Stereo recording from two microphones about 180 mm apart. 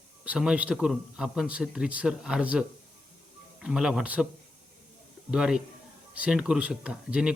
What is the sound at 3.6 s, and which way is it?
Speech, 5° right (ahead or behind).